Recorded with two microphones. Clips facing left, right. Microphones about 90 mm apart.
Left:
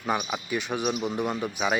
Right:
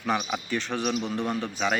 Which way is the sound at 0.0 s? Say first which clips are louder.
Right 1 dB; 10° left (ahead or behind).